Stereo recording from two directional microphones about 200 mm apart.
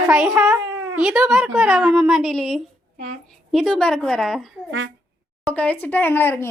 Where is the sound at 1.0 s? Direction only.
5° right (ahead or behind).